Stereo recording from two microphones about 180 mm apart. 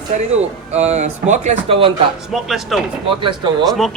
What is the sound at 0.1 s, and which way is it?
Speech, 40° right (ahead or behind).